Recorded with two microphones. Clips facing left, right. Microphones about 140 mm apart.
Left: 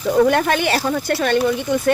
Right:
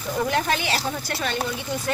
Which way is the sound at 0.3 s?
60° left (ahead or behind).